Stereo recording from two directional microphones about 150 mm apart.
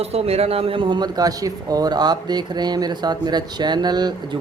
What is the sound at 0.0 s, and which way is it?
A man's voice, 40° right (ahead or behind).